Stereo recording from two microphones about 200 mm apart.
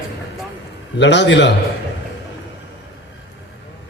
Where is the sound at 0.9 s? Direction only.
60° left (ahead or behind).